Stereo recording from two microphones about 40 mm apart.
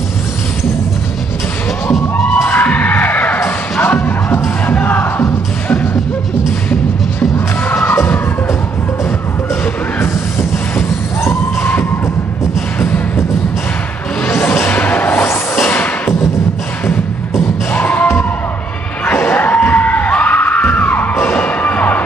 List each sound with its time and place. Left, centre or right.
2.5 s music: left
3.4 s music: left
6.7 s music: left
10.8 s a sound: left
12.8 s music: left
14.2 s music: left
14.7 s a sound: left
17.7 s music: left
19.3 s music: left